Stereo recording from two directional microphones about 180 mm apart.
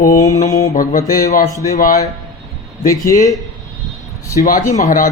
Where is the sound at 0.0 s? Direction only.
45° left (ahead or behind).